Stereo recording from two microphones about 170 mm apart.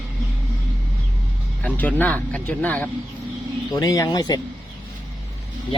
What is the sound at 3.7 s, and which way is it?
Speech, 20° left (ahead or behind).